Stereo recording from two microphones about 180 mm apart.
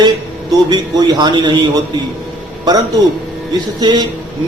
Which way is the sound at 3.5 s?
25° right (ahead or behind).